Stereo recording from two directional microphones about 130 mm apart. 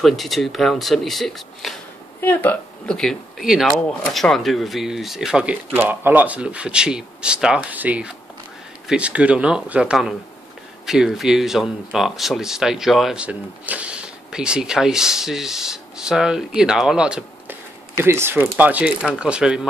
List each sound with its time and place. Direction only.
0.0 s speech: centre (ahead or behind)
2.2 s speech: 15° left (ahead or behind)
3.0 s speech: centre (ahead or behind)
17.9 s speech: 20° right (ahead or behind)